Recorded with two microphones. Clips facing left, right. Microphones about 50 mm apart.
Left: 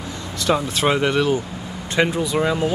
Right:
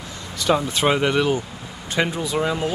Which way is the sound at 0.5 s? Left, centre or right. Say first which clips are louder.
Even; centre.